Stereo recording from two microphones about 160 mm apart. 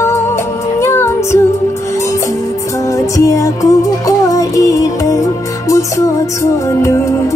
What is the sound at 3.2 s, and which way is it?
Music, 20° left (ahead or behind).